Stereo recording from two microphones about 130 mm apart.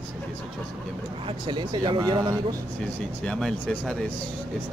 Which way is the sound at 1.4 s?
35° right (ahead or behind).